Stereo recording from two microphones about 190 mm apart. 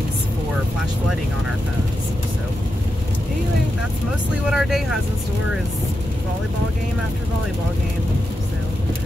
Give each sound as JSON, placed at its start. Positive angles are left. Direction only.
{"t": 4.5, "sound": "speech", "side_deg": 0}